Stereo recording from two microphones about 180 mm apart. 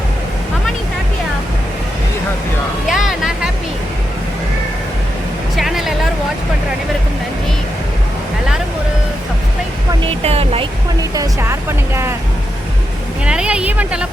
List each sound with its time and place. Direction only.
2.9 s music: centre (ahead or behind)
5.5 s a sound: centre (ahead or behind)
10.2 s music: 35° right (ahead or behind)
11.1 s music: 15° right (ahead or behind)
13.2 s vehicle: 5° right (ahead or behind)